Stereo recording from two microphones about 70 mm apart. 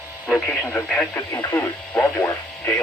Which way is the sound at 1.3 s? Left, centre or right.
Left.